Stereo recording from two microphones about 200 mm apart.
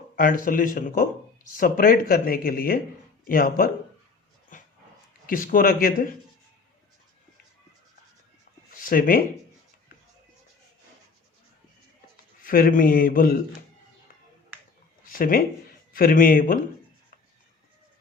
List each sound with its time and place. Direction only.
0.2 s speech: 45° left (ahead or behind)
4.5 s dog: 40° left (ahead or behind)
5.2 s speech: 45° left (ahead or behind)
8.7 s speech: 45° left (ahead or behind)
12.4 s speech: 45° left (ahead or behind)
15.0 s speech: 45° left (ahead or behind)